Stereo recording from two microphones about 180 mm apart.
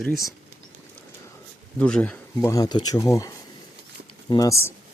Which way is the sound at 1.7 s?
5° left (ahead or behind).